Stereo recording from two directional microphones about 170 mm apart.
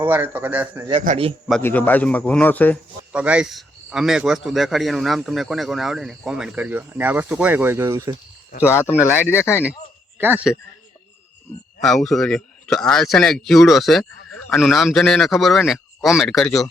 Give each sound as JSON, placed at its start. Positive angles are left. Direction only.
{"t": 0.0, "sound": "a man's voice", "side_deg": -10}
{"t": 1.0, "sound": "a man's voice", "side_deg": -40}
{"t": 1.6, "sound": "speech", "side_deg": 10}
{"t": 3.1, "sound": "speech", "side_deg": -5}
{"t": 8.7, "sound": "speech", "side_deg": 15}
{"t": 9.0, "sound": "a man's voice", "side_deg": -10}
{"t": 9.3, "sound": "speech", "side_deg": 15}
{"t": 10.2, "sound": "a man's voice", "side_deg": -10}
{"t": 11.8, "sound": "speech", "side_deg": 0}